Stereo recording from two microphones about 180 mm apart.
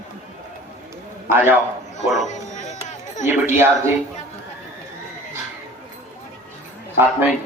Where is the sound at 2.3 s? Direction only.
40° left (ahead or behind).